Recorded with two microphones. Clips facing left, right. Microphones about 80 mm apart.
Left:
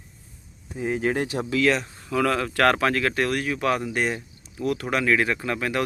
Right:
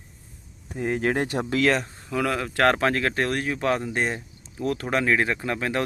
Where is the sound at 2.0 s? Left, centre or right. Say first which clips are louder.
Left 3 dB; centre.